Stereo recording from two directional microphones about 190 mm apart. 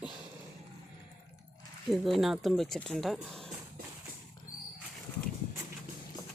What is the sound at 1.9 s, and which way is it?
Speech, centre (ahead or behind).